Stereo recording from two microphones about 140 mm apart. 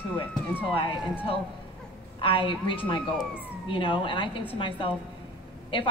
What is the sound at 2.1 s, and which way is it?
A woman's voice, 40° left (ahead or behind).